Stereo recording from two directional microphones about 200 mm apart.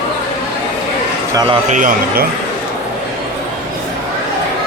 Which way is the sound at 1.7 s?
40° right (ahead or behind).